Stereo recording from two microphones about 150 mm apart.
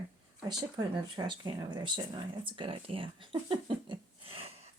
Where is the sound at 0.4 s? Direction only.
30° right (ahead or behind).